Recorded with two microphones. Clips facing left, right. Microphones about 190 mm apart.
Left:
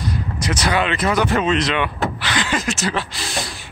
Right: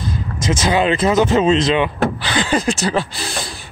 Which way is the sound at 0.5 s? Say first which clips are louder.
Right 4 dB; 25° right (ahead or behind).